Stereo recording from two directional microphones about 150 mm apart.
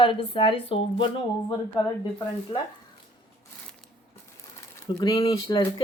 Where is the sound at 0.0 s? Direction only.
35° left (ahead or behind).